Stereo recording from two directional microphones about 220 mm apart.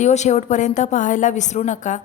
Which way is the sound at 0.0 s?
30° left (ahead or behind).